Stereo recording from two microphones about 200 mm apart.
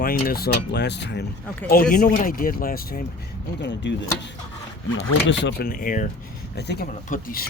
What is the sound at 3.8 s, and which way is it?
Speech, 60° left (ahead or behind).